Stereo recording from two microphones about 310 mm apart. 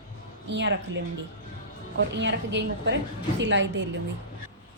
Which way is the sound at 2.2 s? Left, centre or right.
Right.